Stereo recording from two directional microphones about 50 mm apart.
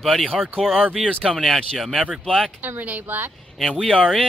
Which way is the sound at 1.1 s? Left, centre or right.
Centre.